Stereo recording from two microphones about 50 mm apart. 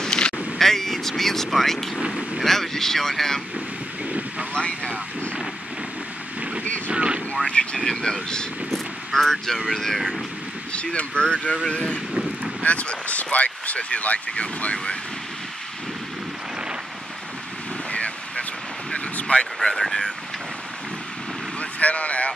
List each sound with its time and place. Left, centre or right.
0.0 s vehicle: centre
0.6 s speech: centre
2.0 s speech: centre
2.4 s speech: centre
4.6 s speech: left
6.9 s speech: right
7.4 s speech: centre
8.7 s vehicle: centre
9.7 s speech: centre
10.7 s speech: left
17.9 s a sound: left
19.6 s speech: centre
21.5 s speech: left